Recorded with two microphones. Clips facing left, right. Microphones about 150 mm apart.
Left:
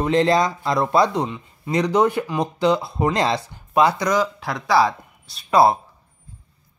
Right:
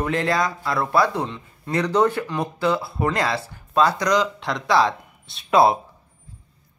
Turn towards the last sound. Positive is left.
turn(degrees=0)  # may be behind; listen again after turning